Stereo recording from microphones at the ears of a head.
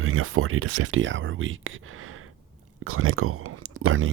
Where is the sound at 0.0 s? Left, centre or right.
Right.